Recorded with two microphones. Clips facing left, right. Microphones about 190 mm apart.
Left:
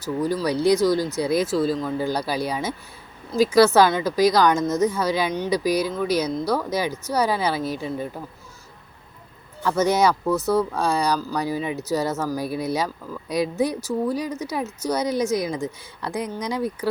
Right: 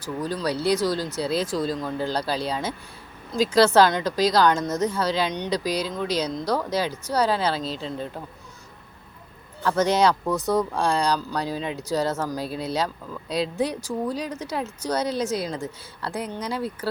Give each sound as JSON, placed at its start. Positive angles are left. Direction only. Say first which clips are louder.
{"t": 0.2, "sound": "a woman's voice", "louder": "left 4 dB", "side_deg": 10}
{"t": 9.6, "sound": "a woman's voice", "louder": "left 1 dB", "side_deg": 10}